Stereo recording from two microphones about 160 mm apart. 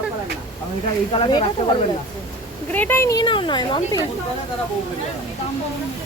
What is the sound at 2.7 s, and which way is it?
Speech, 10° left (ahead or behind).